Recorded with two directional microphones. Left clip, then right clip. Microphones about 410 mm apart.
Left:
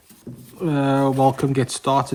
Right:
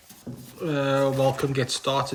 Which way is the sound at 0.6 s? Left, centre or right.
Centre.